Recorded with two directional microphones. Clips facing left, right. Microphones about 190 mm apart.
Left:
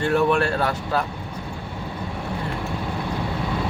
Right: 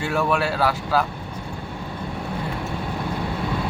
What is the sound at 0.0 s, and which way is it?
Speech, 5° right (ahead or behind).